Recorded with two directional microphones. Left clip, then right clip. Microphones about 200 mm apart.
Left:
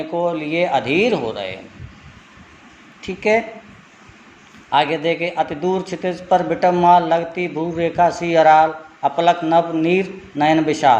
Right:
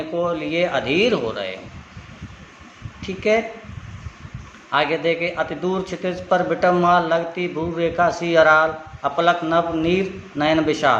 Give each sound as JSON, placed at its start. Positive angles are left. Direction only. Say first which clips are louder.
{"t": 0.2, "sound": "speech", "louder": "left 2 dB", "side_deg": 15}
{"t": 3.0, "sound": "speech", "louder": "left 2 dB", "side_deg": 15}
{"t": 4.7, "sound": "speech", "louder": "left 2 dB", "side_deg": 15}